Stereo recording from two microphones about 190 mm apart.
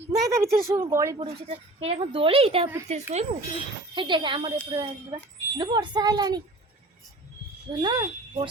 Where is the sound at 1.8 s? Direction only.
30° right (ahead or behind).